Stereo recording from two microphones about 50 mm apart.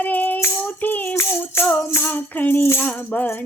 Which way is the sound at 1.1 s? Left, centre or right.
Left.